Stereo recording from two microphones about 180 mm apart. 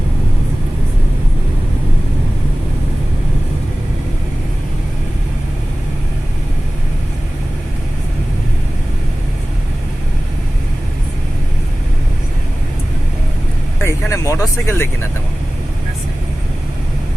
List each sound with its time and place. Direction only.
13.7 s vehicle: 15° left (ahead or behind)